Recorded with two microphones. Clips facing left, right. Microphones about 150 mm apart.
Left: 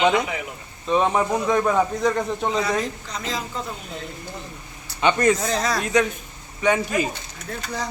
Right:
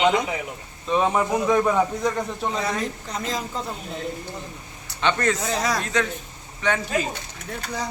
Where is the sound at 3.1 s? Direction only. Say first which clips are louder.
Right 1 dB; 45° right (ahead or behind).